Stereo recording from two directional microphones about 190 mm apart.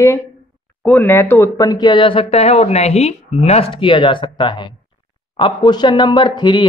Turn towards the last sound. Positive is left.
turn(degrees=25)  # may be behind; listen again after turning